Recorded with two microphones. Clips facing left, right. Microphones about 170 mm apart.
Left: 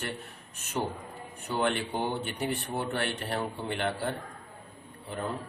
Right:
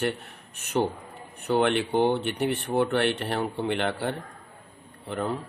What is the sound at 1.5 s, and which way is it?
Speech, 70° right (ahead or behind).